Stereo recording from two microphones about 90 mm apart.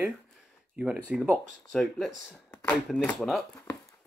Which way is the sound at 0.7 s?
15° right (ahead or behind).